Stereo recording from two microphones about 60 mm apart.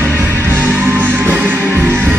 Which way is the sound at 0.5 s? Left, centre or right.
Right.